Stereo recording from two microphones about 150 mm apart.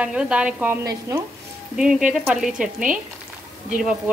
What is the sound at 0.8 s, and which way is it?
Stir, 20° right (ahead or behind).